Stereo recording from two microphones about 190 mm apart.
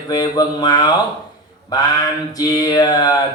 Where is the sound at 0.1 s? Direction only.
20° left (ahead or behind).